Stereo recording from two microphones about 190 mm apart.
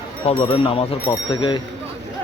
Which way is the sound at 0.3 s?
30° left (ahead or behind).